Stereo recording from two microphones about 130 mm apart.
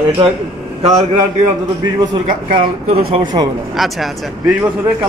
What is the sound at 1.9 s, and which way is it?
A man's voice, 40° right (ahead or behind).